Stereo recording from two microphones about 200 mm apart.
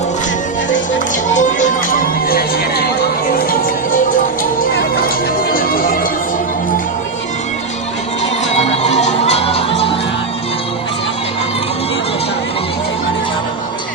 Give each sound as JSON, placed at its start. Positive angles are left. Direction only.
{"t": 1.4, "sound": "music", "side_deg": 40}
{"t": 4.6, "sound": "music", "side_deg": 50}
{"t": 8.5, "sound": "music", "side_deg": 30}